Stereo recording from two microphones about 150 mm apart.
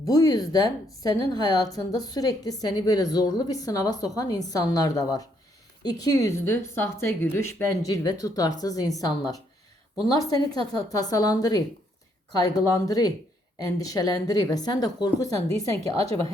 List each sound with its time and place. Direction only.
0.0 s a woman's voice: 25° left (ahead or behind)
10.2 s a woman's voice: 25° left (ahead or behind)
16.0 s speech: 40° right (ahead or behind)